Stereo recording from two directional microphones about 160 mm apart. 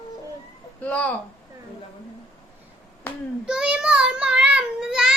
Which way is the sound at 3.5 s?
5° right (ahead or behind).